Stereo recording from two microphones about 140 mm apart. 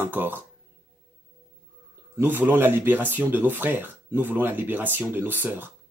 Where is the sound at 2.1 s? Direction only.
15° right (ahead or behind).